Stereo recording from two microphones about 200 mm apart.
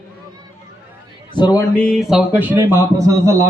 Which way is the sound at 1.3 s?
20° left (ahead or behind).